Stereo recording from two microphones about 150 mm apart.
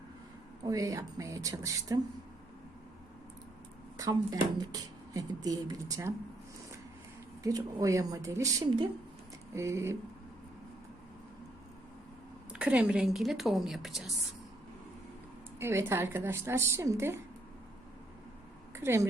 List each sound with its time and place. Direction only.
0.6 s speech: 25° right (ahead or behind)
3.9 s speech: 25° right (ahead or behind)
7.4 s speech: 25° right (ahead or behind)
12.5 s a woman's voice: 5° right (ahead or behind)
15.5 s a woman's voice: 15° right (ahead or behind)
18.7 s speech: 15° right (ahead or behind)